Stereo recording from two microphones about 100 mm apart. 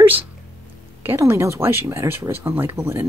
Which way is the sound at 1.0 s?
25° right (ahead or behind).